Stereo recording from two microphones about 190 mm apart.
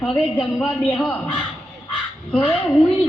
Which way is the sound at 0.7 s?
5° left (ahead or behind).